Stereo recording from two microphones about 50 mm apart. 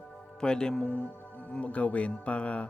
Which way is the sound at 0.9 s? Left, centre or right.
Left.